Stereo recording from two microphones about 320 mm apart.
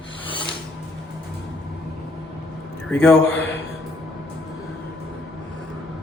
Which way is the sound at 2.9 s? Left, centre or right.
Centre.